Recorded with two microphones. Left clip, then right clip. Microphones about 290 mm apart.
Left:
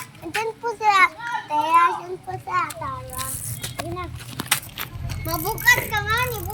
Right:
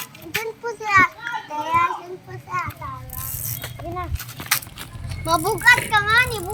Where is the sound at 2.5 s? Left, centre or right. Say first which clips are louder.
Left 3 dB; left.